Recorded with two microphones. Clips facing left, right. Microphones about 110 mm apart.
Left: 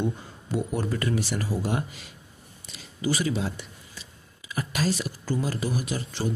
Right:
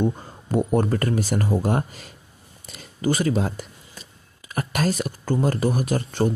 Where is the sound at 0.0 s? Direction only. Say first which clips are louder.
Right 5 dB; 45° right (ahead or behind).